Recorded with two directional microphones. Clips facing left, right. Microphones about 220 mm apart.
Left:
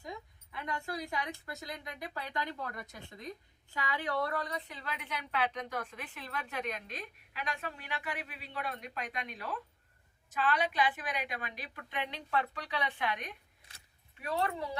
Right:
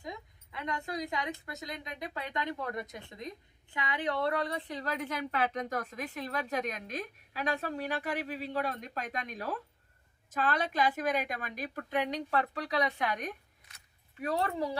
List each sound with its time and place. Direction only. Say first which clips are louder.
0.0 s a woman's voice: right 1 dB; 20° right (ahead or behind)
4.7 s a woman's voice: right 7 dB; 40° right (ahead or behind)